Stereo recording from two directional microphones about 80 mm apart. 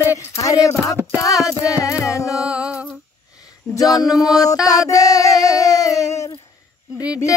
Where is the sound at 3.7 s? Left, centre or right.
Left.